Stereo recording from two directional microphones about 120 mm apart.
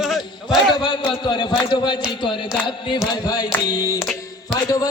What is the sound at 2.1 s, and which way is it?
Music, 45° left (ahead or behind).